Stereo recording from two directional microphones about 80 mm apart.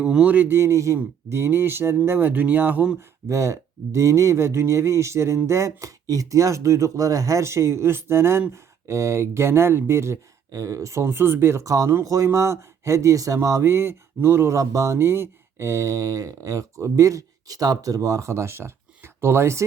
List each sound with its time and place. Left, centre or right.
0.0 s speech: centre
0.3 s speech: right
3.2 s speech: right